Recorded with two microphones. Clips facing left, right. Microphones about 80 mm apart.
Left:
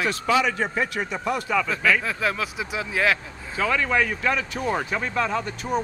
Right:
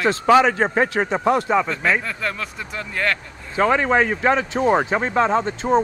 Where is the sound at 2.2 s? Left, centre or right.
Centre.